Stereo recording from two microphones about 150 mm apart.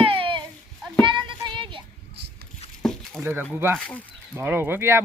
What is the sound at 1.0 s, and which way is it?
Child singing, 30° right (ahead or behind).